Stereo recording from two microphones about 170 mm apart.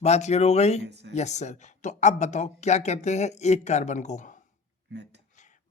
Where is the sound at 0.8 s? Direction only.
85° right.